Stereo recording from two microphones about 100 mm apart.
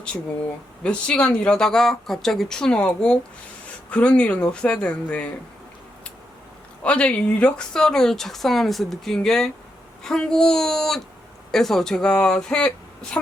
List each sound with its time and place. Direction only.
0.8 s speech: 10° left (ahead or behind)
6.8 s speech: 10° left (ahead or behind)